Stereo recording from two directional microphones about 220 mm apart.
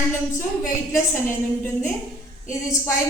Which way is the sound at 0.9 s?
10° left (ahead or behind).